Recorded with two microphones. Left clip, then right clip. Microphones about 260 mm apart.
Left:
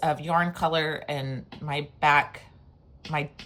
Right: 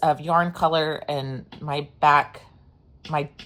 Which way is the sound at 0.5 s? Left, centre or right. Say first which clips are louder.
Right 4 dB; right.